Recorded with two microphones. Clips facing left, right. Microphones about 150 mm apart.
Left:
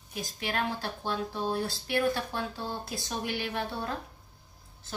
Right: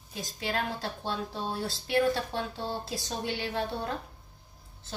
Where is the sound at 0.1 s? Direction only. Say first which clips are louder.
Right 1 dB; 25° right (ahead or behind).